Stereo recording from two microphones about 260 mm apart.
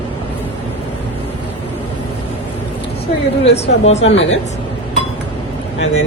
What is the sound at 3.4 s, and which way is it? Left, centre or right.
Speech, left.